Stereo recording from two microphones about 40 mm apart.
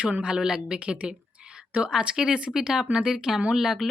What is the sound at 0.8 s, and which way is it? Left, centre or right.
A woman's voice, right.